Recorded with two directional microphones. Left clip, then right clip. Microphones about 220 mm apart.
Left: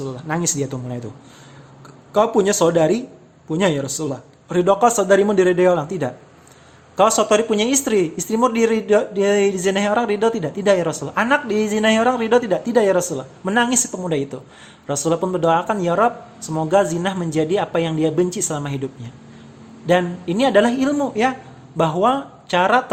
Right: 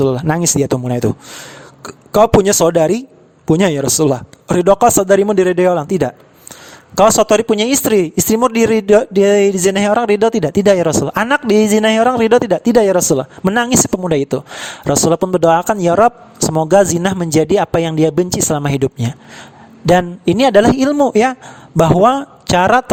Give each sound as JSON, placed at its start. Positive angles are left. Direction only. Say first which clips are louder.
{"t": 0.0, "sound": "speech", "louder": "right 9 dB", "side_deg": -50}